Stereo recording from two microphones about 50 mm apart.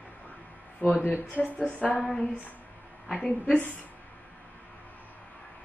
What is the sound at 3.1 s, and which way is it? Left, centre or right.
Speech, centre.